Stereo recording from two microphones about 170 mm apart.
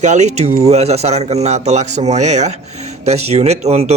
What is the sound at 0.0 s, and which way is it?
Speech, 45° right (ahead or behind).